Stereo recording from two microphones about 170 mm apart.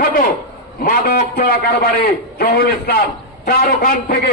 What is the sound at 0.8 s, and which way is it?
A man's voice, 60° left (ahead or behind).